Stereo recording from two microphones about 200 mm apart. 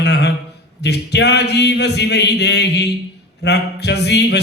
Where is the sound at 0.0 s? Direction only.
60° left (ahead or behind).